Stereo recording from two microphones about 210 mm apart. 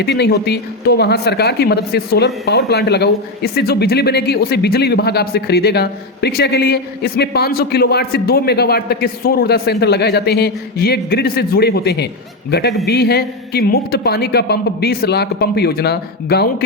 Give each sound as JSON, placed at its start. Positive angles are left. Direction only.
{"t": 0.0, "sound": "speech", "side_deg": 50}